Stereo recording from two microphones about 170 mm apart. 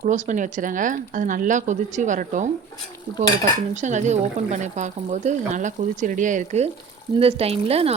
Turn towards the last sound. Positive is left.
turn(degrees=-35)  # may be behind; listen again after turning